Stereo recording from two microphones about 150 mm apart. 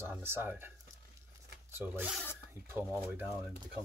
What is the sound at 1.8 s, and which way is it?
Speech, 15° right (ahead or behind).